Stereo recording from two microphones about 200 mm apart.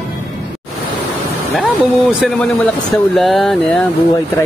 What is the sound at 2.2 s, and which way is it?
Speech, centre (ahead or behind).